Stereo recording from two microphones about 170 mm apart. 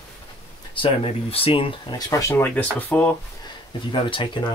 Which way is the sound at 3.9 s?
30° left (ahead or behind).